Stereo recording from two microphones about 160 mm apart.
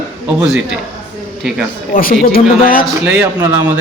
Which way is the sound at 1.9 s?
65° left (ahead or behind).